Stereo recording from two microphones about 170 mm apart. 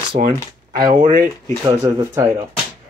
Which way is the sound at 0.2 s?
45° right (ahead or behind).